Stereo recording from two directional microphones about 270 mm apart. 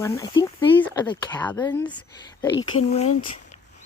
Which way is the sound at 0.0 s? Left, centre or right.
Centre.